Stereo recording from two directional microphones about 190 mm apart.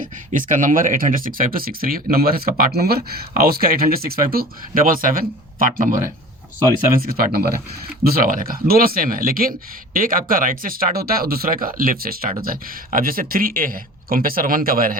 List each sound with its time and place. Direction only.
0.0 s speech: 45° right (ahead or behind)